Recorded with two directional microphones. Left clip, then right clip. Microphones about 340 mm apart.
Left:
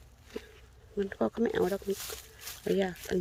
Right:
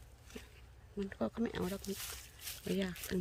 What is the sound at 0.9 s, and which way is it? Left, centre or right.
Speech, centre.